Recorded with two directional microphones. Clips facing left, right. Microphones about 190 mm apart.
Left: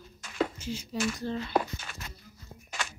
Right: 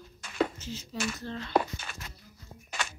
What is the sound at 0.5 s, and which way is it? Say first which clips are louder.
Speech: left 3 dB; 10° left (ahead or behind).